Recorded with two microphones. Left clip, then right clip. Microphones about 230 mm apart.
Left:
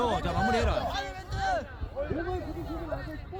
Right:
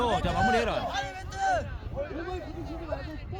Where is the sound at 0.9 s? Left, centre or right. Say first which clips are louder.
Right 2 dB; centre.